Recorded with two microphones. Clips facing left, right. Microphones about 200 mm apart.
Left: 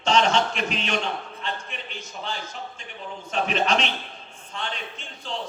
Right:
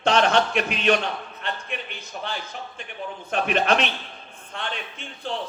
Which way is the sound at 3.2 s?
55° right (ahead or behind).